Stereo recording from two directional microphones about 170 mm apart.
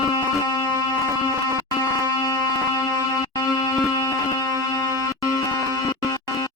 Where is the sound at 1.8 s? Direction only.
20° left (ahead or behind).